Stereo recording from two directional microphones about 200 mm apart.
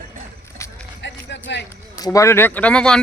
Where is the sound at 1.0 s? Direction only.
60° left (ahead or behind).